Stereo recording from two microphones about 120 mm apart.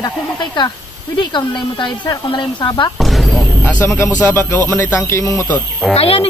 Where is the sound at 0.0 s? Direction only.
40° left (ahead or behind).